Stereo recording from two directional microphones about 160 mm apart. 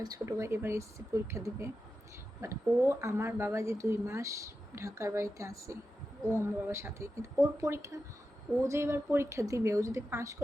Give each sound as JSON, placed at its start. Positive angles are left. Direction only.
{"t": 0.0, "sound": "a woman's voice", "side_deg": -20}